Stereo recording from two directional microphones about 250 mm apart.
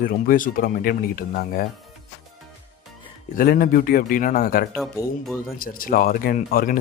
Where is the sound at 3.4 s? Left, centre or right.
Left.